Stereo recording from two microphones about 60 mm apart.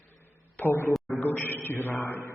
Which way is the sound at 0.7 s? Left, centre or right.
Left.